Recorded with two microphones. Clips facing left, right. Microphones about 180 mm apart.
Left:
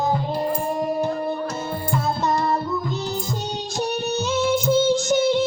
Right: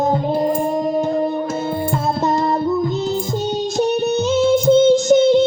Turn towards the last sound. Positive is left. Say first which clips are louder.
# right 7 dB
turn(degrees=-25)  # may be behind; listen again after turning